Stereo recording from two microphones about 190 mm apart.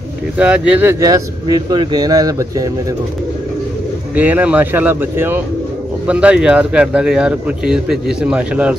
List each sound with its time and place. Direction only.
0.4 s speech: 5° right (ahead or behind)
4.1 s speech: 10° right (ahead or behind)